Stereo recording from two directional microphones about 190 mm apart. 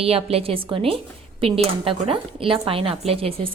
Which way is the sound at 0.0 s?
30° right (ahead or behind).